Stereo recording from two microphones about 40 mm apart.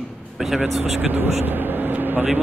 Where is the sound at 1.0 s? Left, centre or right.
Right.